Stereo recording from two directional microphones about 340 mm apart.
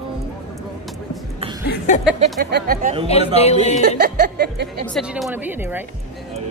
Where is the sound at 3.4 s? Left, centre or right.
Centre.